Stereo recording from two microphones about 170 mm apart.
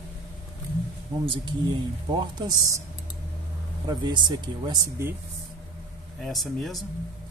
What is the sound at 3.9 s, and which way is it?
Speech, 25° right (ahead or behind).